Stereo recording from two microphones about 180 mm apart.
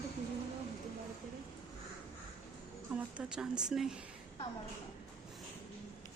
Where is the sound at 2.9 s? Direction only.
5° right (ahead or behind).